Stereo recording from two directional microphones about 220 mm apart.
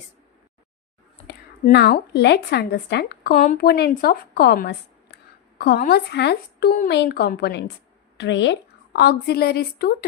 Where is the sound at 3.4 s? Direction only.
35° left (ahead or behind).